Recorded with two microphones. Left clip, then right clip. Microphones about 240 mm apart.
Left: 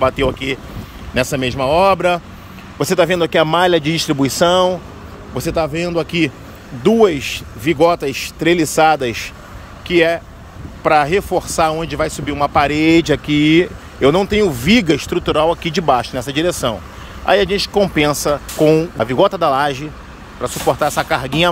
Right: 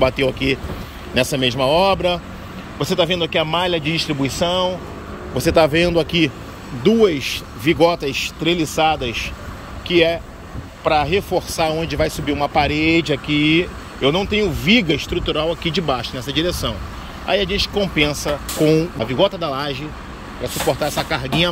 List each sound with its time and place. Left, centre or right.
0.0 s speech: centre
5.3 s a man's voice: centre